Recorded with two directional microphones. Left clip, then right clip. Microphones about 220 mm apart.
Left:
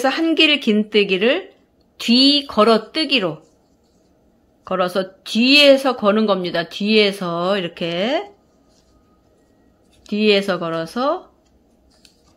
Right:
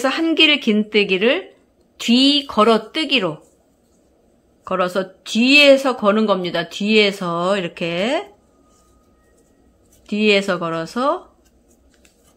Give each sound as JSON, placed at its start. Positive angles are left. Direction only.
{"t": 0.0, "sound": "speech", "side_deg": 0}
{"t": 4.6, "sound": "speech", "side_deg": 0}
{"t": 10.0, "sound": "speech", "side_deg": 0}